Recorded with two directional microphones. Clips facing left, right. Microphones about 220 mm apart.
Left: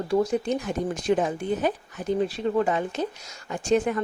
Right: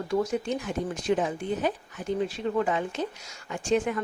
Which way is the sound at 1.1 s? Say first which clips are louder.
Left 2 dB; 45° left (ahead or behind).